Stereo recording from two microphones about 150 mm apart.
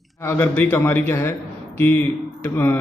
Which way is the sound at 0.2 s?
15° left (ahead or behind).